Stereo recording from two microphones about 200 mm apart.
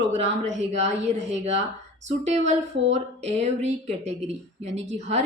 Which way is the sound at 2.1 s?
35° right (ahead or behind).